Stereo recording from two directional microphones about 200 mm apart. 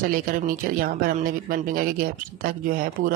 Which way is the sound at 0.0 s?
45° right (ahead or behind).